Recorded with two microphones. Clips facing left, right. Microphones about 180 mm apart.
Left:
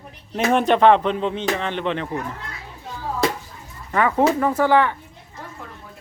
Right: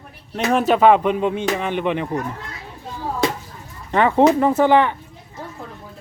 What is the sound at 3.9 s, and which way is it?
Speech, 25° right (ahead or behind).